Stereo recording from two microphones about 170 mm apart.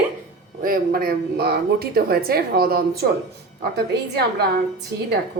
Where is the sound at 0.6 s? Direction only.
55° right (ahead or behind).